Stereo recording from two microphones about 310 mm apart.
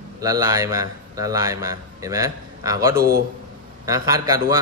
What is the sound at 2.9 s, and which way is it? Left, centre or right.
Speech, right.